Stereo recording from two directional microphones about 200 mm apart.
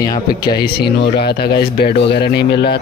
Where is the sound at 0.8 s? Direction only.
55° left (ahead or behind).